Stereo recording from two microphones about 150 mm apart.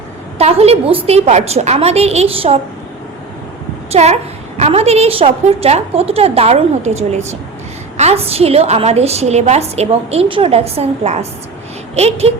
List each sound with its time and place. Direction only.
0.3 s a woman's voice: 45° right (ahead or behind)
3.9 s a woman's voice: 45° right (ahead or behind)